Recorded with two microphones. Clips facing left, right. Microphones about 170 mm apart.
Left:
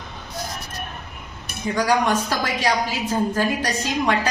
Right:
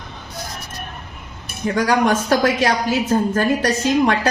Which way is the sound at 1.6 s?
55° right (ahead or behind).